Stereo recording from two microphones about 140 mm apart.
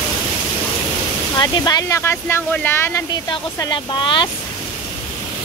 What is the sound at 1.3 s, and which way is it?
Speech, 30° left (ahead or behind).